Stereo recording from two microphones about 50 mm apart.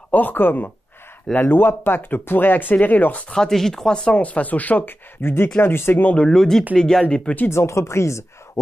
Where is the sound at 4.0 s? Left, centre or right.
Left.